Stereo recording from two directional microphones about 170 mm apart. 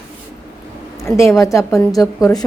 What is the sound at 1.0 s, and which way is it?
A woman's voice, 15° left (ahead or behind).